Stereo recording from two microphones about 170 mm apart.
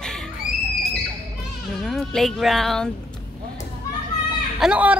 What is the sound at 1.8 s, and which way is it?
Speech, centre (ahead or behind).